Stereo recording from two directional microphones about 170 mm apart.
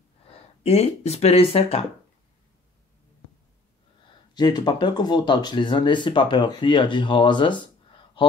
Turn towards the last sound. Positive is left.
turn(degrees=25)  # may be behind; listen again after turning